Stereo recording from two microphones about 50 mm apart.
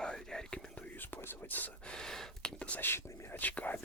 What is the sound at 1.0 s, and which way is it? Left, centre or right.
Whispering, left.